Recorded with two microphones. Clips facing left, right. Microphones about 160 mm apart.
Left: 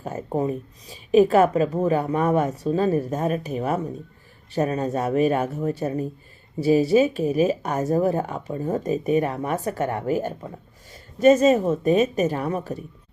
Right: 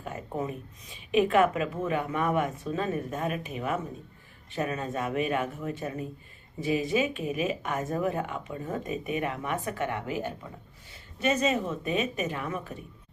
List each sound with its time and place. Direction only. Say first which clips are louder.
0.0 s speech: left 8 dB; 40° left (ahead or behind)